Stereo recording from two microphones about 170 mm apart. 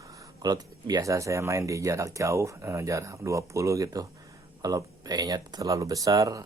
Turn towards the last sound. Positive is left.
turn(degrees=-20)  # may be behind; listen again after turning